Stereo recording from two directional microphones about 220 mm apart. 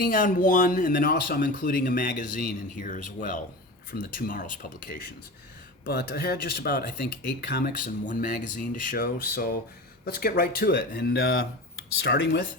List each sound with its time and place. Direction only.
0.0 s speech: 40° left (ahead or behind)